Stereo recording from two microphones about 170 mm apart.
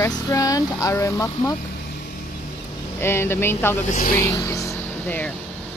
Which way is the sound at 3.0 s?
15° left (ahead or behind).